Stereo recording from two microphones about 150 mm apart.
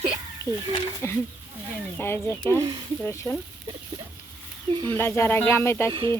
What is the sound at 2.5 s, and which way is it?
Speech, 30° right (ahead or behind).